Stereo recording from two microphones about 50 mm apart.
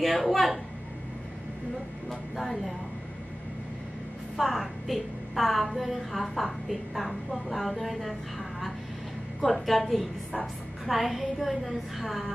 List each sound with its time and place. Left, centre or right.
0.0 s a woman's voice: centre
2.0 s speech: centre
4.4 s a woman's voice: centre